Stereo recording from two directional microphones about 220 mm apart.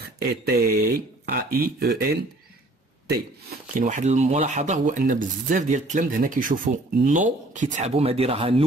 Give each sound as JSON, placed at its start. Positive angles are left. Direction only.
{"t": 0.2, "sound": "speech", "side_deg": -45}